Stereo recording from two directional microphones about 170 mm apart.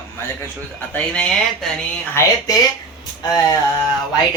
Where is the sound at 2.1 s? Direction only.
20° left (ahead or behind).